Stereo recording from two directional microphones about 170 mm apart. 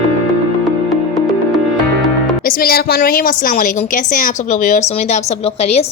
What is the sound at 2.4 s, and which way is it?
A woman's voice, 60° left (ahead or behind).